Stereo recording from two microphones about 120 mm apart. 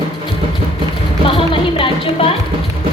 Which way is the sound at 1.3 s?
50° left (ahead or behind).